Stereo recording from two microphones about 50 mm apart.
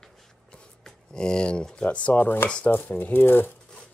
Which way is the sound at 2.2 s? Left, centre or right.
Left.